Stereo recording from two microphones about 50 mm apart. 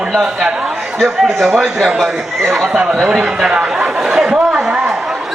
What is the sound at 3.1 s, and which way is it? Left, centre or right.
Chatter, centre.